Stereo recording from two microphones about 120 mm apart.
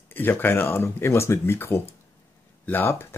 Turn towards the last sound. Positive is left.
turn(degrees=20)  # may be behind; listen again after turning